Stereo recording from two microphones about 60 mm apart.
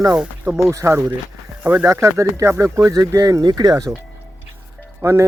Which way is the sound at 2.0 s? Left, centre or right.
Right.